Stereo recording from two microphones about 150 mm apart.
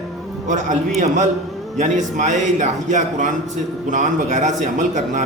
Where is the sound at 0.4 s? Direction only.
55° right (ahead or behind).